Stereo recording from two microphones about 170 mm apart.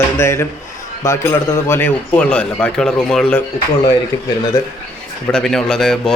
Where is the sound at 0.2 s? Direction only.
15° left (ahead or behind).